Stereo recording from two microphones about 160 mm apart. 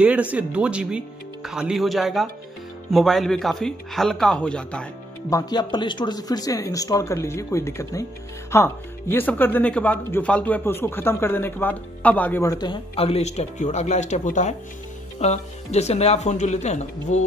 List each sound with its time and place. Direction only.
0.0 s speech: 10° right (ahead or behind)
5.3 s speech: 25° left (ahead or behind); by 17.2 s 45° left (ahead or behind)